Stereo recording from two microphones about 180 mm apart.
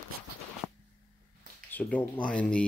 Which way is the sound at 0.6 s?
5° right (ahead or behind).